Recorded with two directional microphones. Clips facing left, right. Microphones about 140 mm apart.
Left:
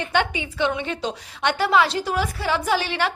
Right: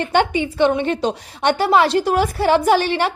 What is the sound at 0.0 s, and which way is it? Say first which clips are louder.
A woman's voice: right 6 dB; 50° right (ahead or behind).